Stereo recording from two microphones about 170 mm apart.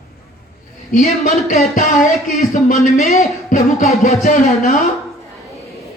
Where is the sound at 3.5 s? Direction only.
40° left (ahead or behind).